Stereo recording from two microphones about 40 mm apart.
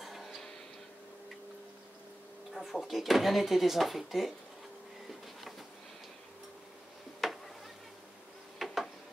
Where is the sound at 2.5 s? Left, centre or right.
Centre.